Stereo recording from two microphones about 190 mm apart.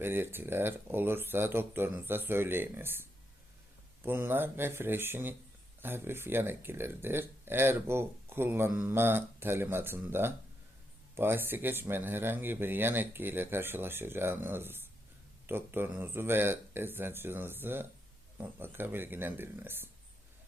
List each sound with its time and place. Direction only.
0.0 s speech: 10° right (ahead or behind)